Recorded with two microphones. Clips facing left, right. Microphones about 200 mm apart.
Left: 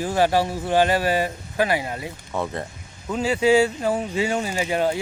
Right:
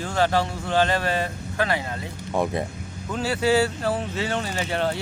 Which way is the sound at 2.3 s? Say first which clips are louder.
Right 3 dB; 15° right (ahead or behind).